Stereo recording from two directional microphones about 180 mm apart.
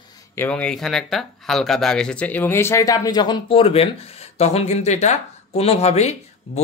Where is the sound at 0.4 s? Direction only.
5° left (ahead or behind).